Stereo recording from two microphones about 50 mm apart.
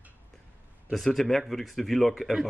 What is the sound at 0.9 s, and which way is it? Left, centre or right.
Speech, centre.